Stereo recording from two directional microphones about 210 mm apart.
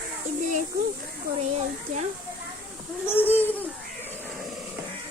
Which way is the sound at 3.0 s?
10° left (ahead or behind).